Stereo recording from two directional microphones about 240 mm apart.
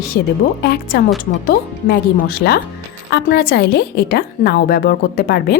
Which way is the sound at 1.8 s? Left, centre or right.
Left.